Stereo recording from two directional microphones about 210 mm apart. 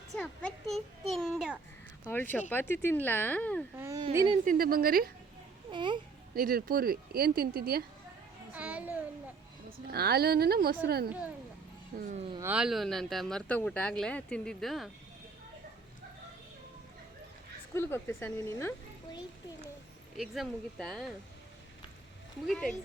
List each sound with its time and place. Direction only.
0.1 s speech: 5° left (ahead or behind)
3.8 s a child's voice: 15° right (ahead or behind)
4.4 s speech: 45° right (ahead or behind)
5.7 s speech: 20° right (ahead or behind)
6.3 s speech: 45° right (ahead or behind)
8.5 s a child's voice: 5° right (ahead or behind)
9.6 s speech: 45° right (ahead or behind)
12.4 s speech: 5° right (ahead or behind)
17.7 s speech: 10° left (ahead or behind)
20.1 s speech: centre (ahead or behind)
22.4 s speech: 5° left (ahead or behind)